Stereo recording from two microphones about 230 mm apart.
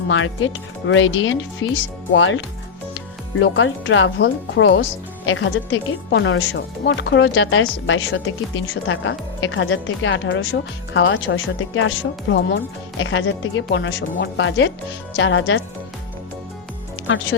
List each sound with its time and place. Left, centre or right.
0.1 s speech: left